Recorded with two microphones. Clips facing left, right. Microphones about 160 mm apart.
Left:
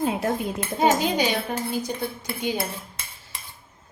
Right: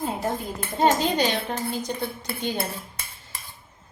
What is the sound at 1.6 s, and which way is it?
Cutlery, centre (ahead or behind).